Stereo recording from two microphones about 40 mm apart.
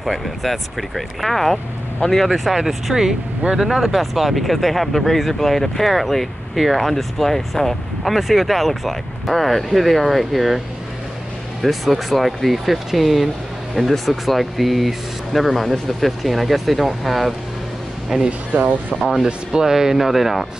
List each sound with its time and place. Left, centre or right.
0.0 s speech: centre
2.3 s speech: centre
11.6 s speech: centre
18.1 s speech: centre
18.5 s speech: right
18.9 s speech: centre
19.2 s speech: centre